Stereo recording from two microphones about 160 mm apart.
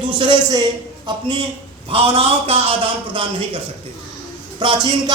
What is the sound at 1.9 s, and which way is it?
A man's voice, 35° right (ahead or behind).